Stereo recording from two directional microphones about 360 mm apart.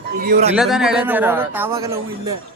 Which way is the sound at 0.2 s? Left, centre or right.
Right.